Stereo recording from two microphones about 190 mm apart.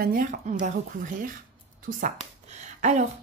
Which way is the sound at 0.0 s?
45° right (ahead or behind).